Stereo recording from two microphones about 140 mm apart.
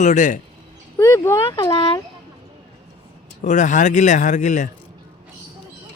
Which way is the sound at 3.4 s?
60° left (ahead or behind).